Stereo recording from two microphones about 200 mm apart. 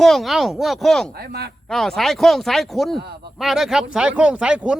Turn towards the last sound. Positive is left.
turn(degrees=-5)  # may be behind; listen again after turning